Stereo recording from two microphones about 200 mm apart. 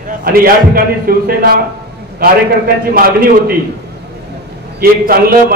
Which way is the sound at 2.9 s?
45° right (ahead or behind).